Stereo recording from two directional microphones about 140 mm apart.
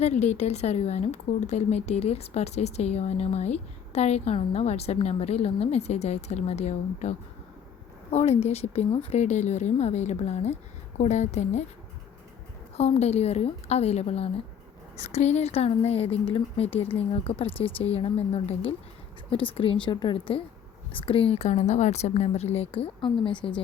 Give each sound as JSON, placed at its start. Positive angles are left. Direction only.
{"t": 0.0, "sound": "speech", "side_deg": 55}
{"t": 8.1, "sound": "a woman's voice", "side_deg": 50}
{"t": 12.7, "sound": "speech", "side_deg": 50}